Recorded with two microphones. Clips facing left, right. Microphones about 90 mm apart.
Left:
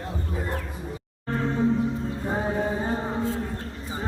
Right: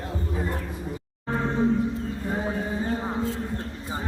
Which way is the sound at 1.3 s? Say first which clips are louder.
Even; 5° right (ahead or behind).